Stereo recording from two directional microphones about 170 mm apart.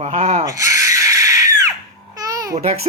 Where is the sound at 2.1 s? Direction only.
20° right (ahead or behind).